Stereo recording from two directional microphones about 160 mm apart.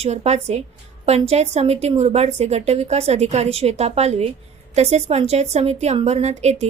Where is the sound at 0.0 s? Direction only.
45° right (ahead or behind).